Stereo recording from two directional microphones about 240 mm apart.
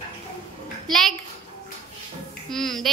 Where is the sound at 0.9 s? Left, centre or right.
Centre.